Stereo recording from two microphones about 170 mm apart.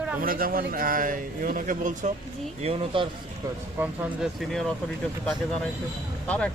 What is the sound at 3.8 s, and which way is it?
Speech, centre (ahead or behind).